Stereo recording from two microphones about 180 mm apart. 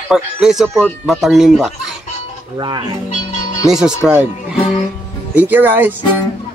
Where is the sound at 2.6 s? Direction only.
25° right (ahead or behind).